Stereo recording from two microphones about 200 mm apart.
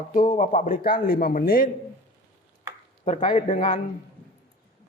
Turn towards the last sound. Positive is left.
turn(degrees=40)  # may be behind; listen again after turning